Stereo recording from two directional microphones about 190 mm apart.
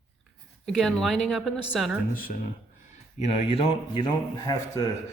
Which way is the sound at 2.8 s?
40° left (ahead or behind).